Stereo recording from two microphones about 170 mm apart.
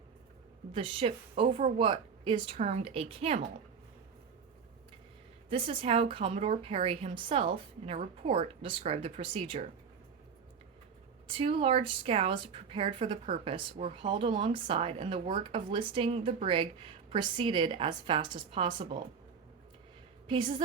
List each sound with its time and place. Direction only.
0.7 s a woman's voice: 30° right (ahead or behind)
5.5 s a woman's voice: 30° right (ahead or behind)
11.3 s a woman's voice: 35° right (ahead or behind)
20.2 s a woman's voice: 30° right (ahead or behind)